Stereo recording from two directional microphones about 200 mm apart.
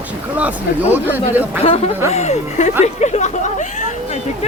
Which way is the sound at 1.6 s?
30° left (ahead or behind).